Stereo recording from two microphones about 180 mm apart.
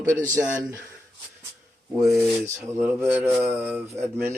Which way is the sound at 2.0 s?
Centre (ahead or behind).